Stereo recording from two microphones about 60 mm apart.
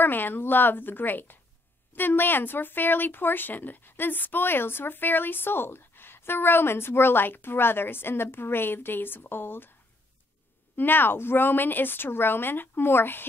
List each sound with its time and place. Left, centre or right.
0.0 s speech: left
10.8 s speech: left